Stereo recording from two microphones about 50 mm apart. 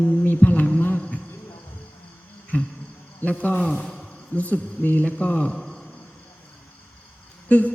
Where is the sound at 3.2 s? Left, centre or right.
Left.